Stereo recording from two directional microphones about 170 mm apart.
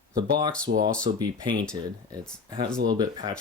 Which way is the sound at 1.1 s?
25° right (ahead or behind).